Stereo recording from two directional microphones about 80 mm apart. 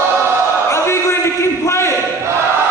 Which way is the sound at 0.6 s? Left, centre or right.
Left.